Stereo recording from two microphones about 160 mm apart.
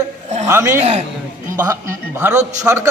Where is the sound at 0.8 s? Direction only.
45° right (ahead or behind).